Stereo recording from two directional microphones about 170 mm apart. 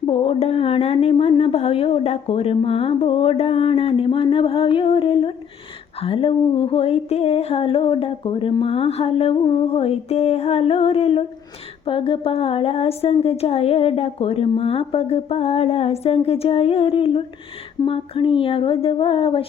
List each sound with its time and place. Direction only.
0.1 s a woman's voice: 35° left (ahead or behind)